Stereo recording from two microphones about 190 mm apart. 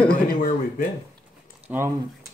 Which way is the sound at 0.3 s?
45° left (ahead or behind).